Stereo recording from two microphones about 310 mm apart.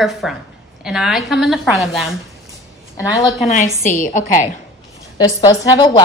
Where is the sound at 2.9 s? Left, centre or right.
Centre.